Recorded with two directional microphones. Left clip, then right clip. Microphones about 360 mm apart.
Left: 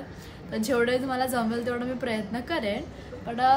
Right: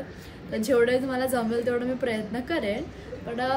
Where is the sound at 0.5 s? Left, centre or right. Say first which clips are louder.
Right 3 dB; centre.